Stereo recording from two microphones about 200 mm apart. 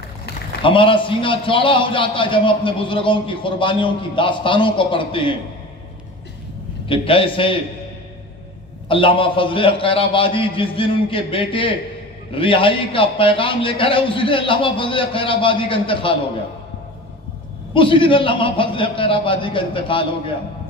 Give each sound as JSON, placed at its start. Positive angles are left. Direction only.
{"t": 0.6, "sound": "a man's voice", "side_deg": 25}
{"t": 6.9, "sound": "a man's voice", "side_deg": 25}
{"t": 8.8, "sound": "a man's voice", "side_deg": 25}
{"t": 17.7, "sound": "a man's voice", "side_deg": 25}